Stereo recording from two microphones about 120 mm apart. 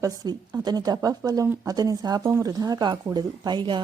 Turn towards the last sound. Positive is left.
turn(degrees=-40)  # may be behind; listen again after turning